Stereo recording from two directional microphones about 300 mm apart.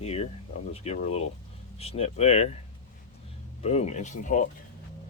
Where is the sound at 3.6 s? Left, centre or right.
Left.